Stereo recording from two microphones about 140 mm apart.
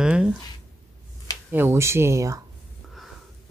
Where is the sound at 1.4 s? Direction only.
15° right (ahead or behind).